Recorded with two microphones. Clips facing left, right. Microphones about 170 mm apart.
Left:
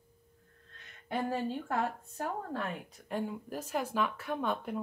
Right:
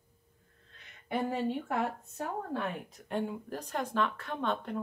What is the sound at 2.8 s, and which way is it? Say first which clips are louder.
Speech: right 2 dB; centre (ahead or behind).